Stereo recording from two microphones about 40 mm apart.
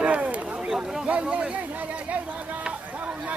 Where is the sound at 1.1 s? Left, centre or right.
Right.